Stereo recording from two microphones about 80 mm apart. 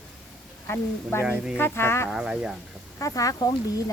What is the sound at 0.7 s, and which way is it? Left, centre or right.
Speech, left.